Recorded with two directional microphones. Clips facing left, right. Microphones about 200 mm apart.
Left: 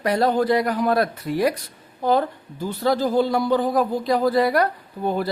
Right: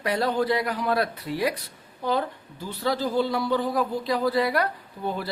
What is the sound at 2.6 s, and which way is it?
A woman's voice, 45° left (ahead or behind).